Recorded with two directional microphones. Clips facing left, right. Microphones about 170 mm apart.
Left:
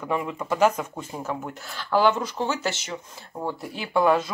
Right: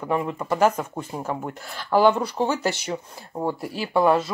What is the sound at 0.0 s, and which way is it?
Speech, 20° right (ahead or behind).